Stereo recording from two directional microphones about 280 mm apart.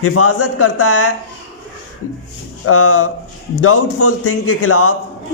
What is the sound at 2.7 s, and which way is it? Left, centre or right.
A man's voice, left.